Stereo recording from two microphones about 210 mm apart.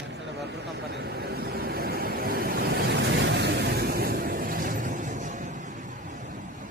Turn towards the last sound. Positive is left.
turn(degrees=-35)  # may be behind; listen again after turning